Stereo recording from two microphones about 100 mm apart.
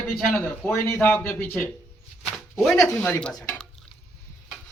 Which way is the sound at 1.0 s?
20° left (ahead or behind).